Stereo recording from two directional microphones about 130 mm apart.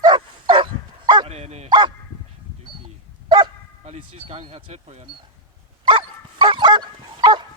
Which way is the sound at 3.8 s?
55° right (ahead or behind).